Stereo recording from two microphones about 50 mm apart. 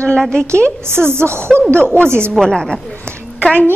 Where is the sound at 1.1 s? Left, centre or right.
Right.